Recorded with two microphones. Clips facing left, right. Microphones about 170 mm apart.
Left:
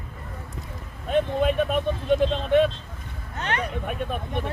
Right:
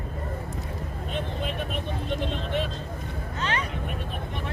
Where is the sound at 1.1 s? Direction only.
50° left (ahead or behind).